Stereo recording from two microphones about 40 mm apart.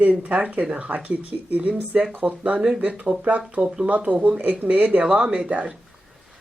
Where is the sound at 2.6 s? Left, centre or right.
Centre.